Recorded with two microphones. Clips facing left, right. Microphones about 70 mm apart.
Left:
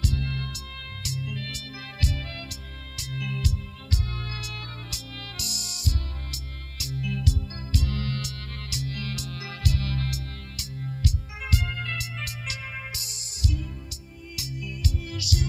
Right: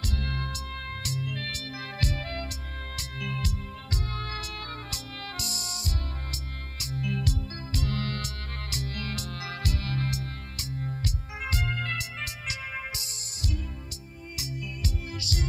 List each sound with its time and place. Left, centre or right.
0.0 s music: right
14.3 s music: right